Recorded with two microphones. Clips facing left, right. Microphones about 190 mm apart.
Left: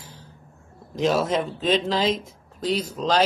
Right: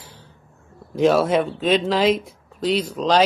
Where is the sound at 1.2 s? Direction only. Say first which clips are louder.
Right 4 dB; 5° right (ahead or behind).